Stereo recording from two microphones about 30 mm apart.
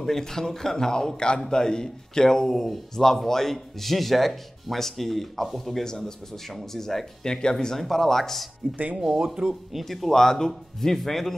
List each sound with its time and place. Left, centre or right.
0.0 s a man's voice: centre
2.5 s speech: centre
5.9 s a man's voice: left
6.3 s speech: centre
7.2 s a man's voice: left
7.5 s speech: centre
9.0 s speech: centre
9.8 s speech: centre